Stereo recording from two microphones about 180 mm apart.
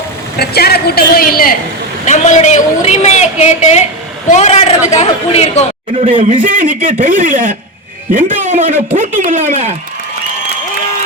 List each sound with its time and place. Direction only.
0.3 s a man's voice: 60° left (ahead or behind)
2.0 s a woman's voice: 40° left (ahead or behind)
6.2 s speech: 45° right (ahead or behind)